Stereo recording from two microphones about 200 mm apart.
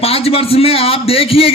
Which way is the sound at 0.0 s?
30° left (ahead or behind).